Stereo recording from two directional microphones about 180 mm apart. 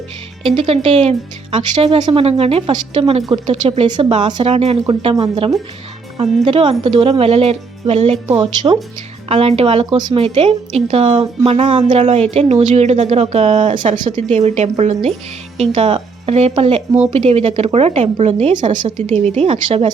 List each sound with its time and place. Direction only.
0.4 s a woman's voice: 30° right (ahead or behind)
18.5 s speech: 25° right (ahead or behind)
18.9 s a woman's voice: 35° right (ahead or behind)